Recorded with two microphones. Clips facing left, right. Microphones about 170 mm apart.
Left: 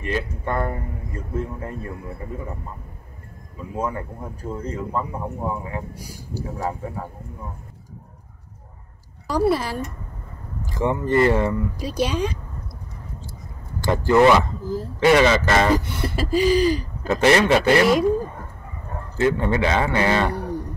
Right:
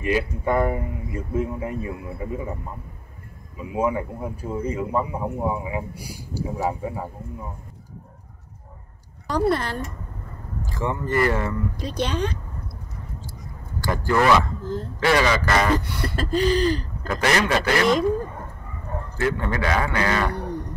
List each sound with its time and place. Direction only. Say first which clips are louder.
0.0 s a man's voice: right 3 dB; 10° right (ahead or behind)
3.5 s a man's voice: right 4 dB; 10° right (ahead or behind)
9.3 s a sound: left 2 dB; 5° left (ahead or behind)
10.6 s speech: left 4 dB; 20° left (ahead or behind)
11.7 s a sound: left 2 dB; 10° left (ahead or behind)
13.8 s speech: left 5 dB; 20° left (ahead or behind)
14.6 s speech: left 2 dB; 5° left (ahead or behind)
15.0 s speech: left 4 dB; 20° left (ahead or behind)
16.2 s a sound: left 3 dB; 10° left (ahead or behind)
17.1 s speech: left 5 dB; 25° left (ahead or behind)
19.1 s a man's voice: left 5 dB; 20° left (ahead or behind)